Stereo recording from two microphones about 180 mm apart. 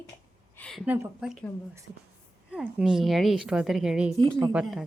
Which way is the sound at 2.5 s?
5° right (ahead or behind).